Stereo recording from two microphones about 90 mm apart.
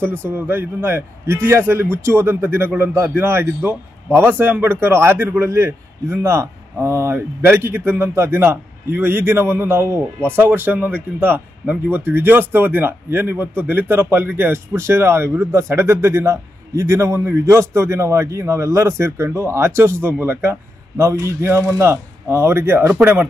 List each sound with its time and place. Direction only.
0.0 s speech: 25° right (ahead or behind)